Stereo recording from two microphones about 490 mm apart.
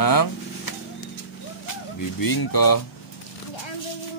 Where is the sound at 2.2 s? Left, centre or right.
Left.